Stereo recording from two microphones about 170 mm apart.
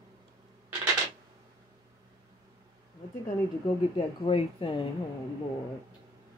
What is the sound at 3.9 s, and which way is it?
Speech, 35° left (ahead or behind).